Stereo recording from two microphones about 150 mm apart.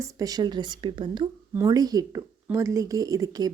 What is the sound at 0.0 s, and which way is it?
Speech, 25° right (ahead or behind).